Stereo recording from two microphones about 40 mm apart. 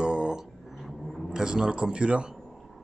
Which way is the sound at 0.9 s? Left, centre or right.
Centre.